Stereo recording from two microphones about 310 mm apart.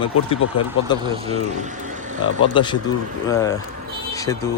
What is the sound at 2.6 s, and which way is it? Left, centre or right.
Speech, centre.